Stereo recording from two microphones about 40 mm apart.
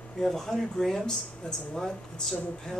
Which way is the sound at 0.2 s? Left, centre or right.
Centre.